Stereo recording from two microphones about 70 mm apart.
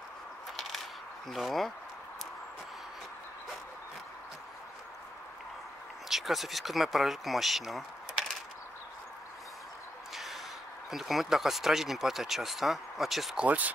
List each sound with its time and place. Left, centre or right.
1.3 s speech: centre
6.0 s speech: centre
10.1 s a sound: centre
10.9 s speech: centre
13.4 s speech: right